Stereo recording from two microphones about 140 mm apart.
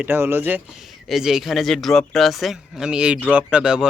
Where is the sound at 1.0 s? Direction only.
Centre (ahead or behind).